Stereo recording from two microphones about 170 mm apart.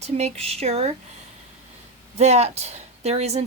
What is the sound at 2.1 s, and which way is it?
Speech, 40° right (ahead or behind).